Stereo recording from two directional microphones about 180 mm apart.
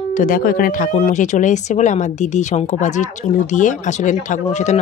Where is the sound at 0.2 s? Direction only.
50° left (ahead or behind).